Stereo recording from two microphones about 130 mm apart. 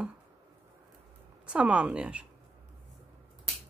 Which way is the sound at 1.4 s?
10° right (ahead or behind).